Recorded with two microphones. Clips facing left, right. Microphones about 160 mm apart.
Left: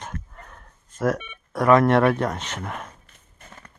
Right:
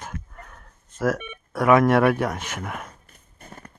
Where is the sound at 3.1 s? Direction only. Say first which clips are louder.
Right 3 dB; 40° right (ahead or behind).